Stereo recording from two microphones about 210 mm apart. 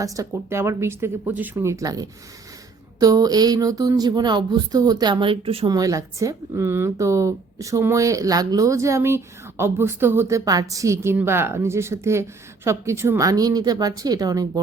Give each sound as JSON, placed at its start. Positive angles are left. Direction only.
{"t": 0.0, "sound": "speech", "side_deg": -15}